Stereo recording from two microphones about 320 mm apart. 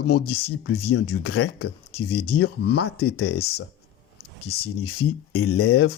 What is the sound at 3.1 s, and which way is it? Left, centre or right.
Speech, left.